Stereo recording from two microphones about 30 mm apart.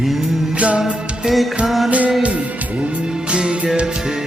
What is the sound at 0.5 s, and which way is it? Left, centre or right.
Music, right.